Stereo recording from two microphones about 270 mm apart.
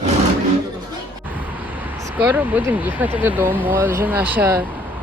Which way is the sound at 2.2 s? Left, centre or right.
Centre.